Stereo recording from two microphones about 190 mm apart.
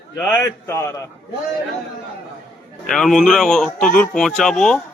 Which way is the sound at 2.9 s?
5° left (ahead or behind).